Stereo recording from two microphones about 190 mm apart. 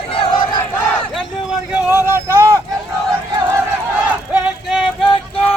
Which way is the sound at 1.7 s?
10° right (ahead or behind).